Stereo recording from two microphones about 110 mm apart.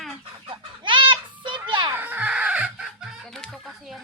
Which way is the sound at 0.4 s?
45° right (ahead or behind).